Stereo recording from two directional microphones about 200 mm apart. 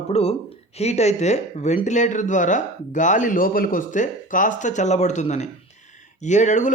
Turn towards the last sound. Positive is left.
turn(degrees=35)  # may be behind; listen again after turning